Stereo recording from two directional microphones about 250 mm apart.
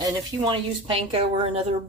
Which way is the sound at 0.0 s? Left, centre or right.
Right.